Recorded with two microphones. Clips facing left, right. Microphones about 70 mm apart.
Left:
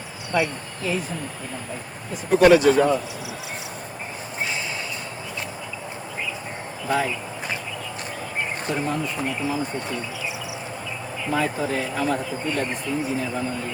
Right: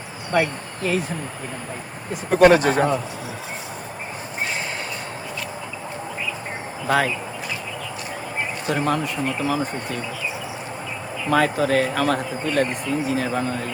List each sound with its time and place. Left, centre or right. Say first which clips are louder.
0.3 s speech: right 2 dB; right
2.3 s speech: even; right
6.8 s speech: right 3 dB; right
8.7 s speech: right 5 dB; right
11.3 s speech: right 5 dB; right